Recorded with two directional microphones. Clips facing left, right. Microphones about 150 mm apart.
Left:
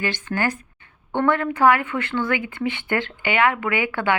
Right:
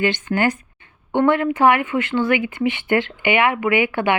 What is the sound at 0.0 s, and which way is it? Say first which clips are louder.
A woman's voice: right 5 dB; 20° right (ahead or behind).